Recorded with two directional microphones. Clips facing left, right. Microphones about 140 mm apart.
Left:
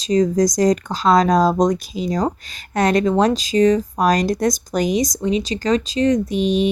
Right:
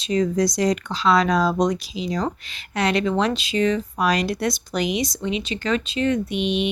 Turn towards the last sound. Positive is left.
turn(degrees=40)  # may be behind; listen again after turning